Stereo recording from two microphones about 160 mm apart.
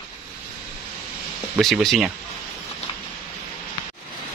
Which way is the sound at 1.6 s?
Centre (ahead or behind).